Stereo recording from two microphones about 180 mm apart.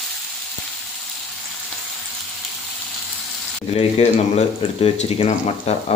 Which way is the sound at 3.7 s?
35° left (ahead or behind).